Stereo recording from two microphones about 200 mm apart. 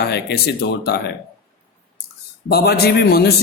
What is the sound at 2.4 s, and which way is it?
Speech, 55° left (ahead or behind).